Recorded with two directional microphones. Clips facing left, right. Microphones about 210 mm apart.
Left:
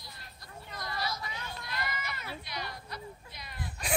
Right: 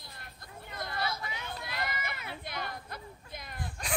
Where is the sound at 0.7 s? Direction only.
55° right (ahead or behind).